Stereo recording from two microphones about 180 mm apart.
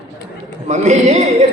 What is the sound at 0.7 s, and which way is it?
Speech, 40° right (ahead or behind).